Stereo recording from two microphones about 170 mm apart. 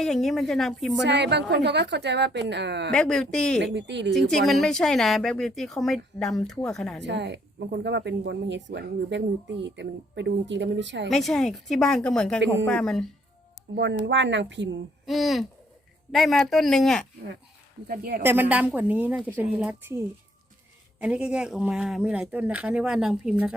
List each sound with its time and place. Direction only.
0.0 s speech: centre (ahead or behind)
1.0 s speech: 90° right
2.9 s speech: 5° left (ahead or behind)
3.6 s speech: 90° right
4.1 s speech: centre (ahead or behind)
7.0 s speech: 90° right
11.1 s speech: centre (ahead or behind)
13.7 s speech: 90° right
15.0 s speech: centre (ahead or behind)
17.8 s speech: 65° right (ahead or behind)
18.2 s a woman's voice: 10° right (ahead or behind)
21.0 s speech: 5° right (ahead or behind)